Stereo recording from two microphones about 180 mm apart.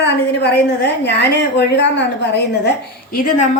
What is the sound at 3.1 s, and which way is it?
Speech, 50° left (ahead or behind).